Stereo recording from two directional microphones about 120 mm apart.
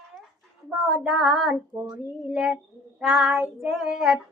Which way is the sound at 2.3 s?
5° right (ahead or behind).